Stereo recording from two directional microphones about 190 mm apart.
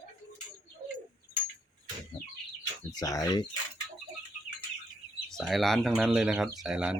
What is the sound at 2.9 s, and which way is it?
Speech, 20° left (ahead or behind).